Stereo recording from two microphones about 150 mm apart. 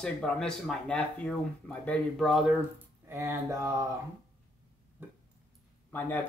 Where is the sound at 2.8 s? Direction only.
15° right (ahead or behind).